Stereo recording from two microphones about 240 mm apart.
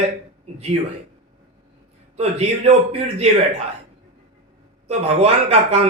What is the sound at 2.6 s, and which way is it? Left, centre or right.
Speech, right.